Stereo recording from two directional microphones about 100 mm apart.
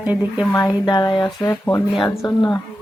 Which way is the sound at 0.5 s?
40° left (ahead or behind).